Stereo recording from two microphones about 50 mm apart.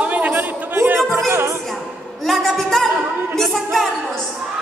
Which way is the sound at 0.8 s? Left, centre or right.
Right.